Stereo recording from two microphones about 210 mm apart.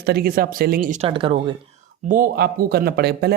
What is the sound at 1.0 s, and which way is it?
Speech, 25° right (ahead or behind).